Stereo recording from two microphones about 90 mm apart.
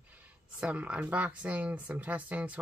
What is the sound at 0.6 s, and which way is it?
Speech, 10° right (ahead or behind).